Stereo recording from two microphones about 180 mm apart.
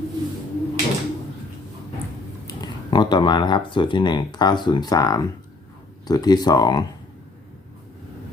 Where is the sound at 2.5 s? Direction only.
25° left (ahead or behind).